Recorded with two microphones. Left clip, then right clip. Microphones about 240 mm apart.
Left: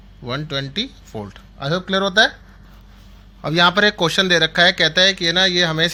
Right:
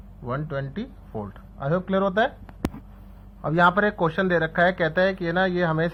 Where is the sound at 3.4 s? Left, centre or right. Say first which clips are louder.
Left 5 dB; left.